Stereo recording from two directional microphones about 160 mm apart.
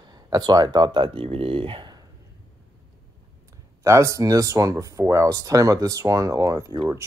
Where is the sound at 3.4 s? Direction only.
20° right (ahead or behind).